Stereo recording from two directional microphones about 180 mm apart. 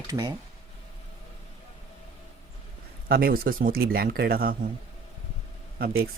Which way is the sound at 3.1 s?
55° right (ahead or behind).